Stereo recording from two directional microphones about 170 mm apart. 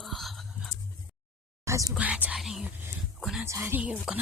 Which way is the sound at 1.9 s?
10° right (ahead or behind).